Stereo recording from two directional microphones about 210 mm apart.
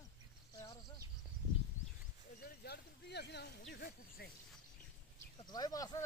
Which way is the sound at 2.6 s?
50° left (ahead or behind).